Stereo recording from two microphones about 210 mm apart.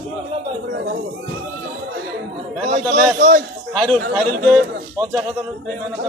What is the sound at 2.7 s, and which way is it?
Speech, 35° right (ahead or behind).